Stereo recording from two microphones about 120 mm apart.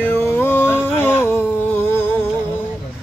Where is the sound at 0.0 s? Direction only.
20° left (ahead or behind).